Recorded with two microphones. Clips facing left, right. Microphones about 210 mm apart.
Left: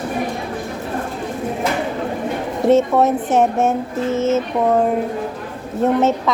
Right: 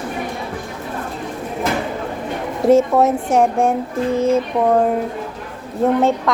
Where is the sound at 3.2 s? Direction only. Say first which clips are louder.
Even; 20° left (ahead or behind).